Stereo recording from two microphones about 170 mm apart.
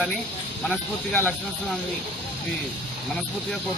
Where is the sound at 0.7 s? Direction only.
10° left (ahead or behind).